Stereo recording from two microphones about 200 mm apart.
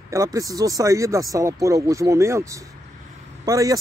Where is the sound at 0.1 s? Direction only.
15° right (ahead or behind).